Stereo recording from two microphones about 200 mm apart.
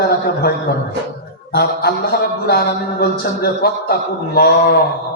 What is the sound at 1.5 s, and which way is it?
A man's voice, 50° left (ahead or behind).